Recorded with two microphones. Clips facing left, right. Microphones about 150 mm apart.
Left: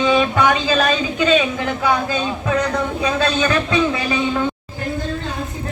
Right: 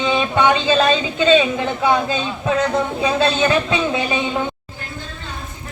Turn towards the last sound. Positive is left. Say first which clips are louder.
# left 1 dB
turn(degrees=-25)  # may be behind; listen again after turning